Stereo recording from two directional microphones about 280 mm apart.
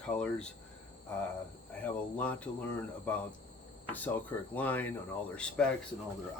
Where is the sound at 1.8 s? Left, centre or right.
Centre.